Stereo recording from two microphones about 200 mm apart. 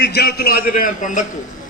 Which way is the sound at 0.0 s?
55° left (ahead or behind).